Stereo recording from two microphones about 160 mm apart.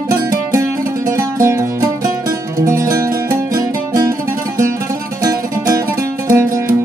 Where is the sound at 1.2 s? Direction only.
20° right (ahead or behind).